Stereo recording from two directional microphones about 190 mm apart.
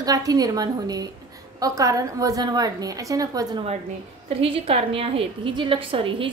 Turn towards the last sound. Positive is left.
turn(degrees=-25)  # may be behind; listen again after turning